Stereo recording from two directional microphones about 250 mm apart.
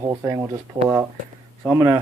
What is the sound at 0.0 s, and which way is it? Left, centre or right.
Speech, centre.